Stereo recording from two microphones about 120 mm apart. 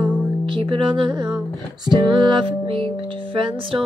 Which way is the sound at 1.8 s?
40° right (ahead or behind).